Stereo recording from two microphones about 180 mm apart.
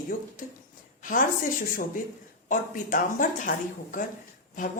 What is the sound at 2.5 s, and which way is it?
A woman's voice, 45° left (ahead or behind).